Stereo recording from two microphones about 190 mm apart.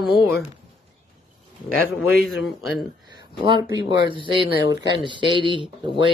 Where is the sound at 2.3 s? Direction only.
Centre (ahead or behind).